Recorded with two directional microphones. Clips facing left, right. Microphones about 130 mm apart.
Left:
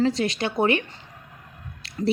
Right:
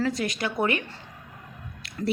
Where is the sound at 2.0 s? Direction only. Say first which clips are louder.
Left 4 dB; 20° left (ahead or behind).